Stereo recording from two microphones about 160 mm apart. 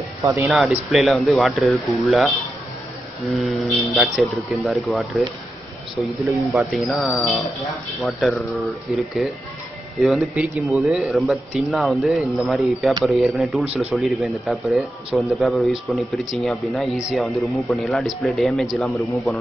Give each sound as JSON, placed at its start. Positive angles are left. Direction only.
{"t": 0.2, "sound": "speech", "side_deg": -15}
{"t": 0.5, "sound": "a man's voice", "side_deg": -5}
{"t": 6.9, "sound": "a man's voice", "side_deg": 5}